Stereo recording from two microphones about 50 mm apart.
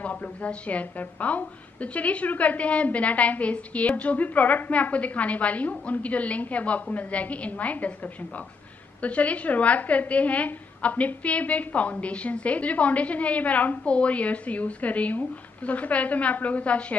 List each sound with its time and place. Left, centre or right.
0.0 s a woman's voice: left